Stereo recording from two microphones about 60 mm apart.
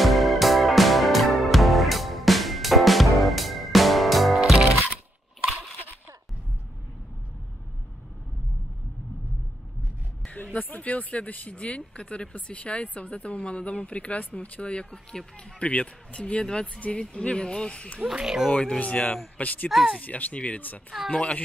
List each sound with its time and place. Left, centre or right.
0.0 s music: centre
10.2 s speech: left
18.0 s speech: centre
18.5 s speech: left
19.7 s speech: centre
20.0 s speech: left